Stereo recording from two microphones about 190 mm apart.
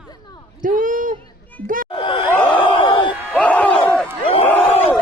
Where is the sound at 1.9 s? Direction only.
25° left (ahead or behind).